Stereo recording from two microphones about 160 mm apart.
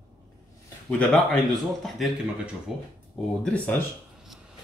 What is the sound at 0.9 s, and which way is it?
Speech, 5° left (ahead or behind).